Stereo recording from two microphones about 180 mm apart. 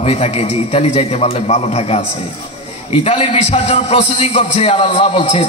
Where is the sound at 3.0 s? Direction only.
35° left (ahead or behind).